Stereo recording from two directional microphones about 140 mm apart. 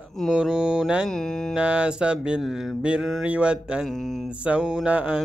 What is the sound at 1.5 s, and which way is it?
Mantra, 10° right (ahead or behind).